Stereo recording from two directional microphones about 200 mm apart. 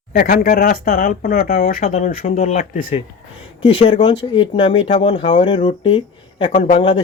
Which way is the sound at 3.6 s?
25° left (ahead or behind).